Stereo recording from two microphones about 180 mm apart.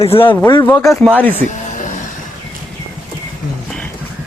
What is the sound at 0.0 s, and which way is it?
Speech, 30° left (ahead or behind).